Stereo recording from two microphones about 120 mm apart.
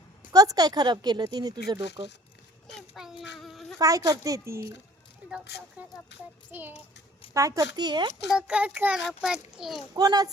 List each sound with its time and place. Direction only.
0.3 s speech: 30° right (ahead or behind)
2.7 s a sound: centre (ahead or behind)
3.8 s speech: 30° right (ahead or behind)
6.5 s a child's voice: 15° right (ahead or behind)
7.3 s speech: 30° right (ahead or behind)
8.3 s a child's voice: 5° right (ahead or behind)
9.9 s speech: 35° right (ahead or behind)